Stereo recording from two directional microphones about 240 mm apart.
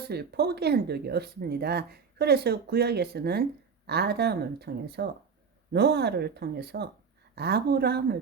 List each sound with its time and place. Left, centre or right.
0.1 s speech: right